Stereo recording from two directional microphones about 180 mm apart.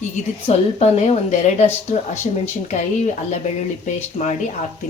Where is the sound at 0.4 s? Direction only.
35° left (ahead or behind).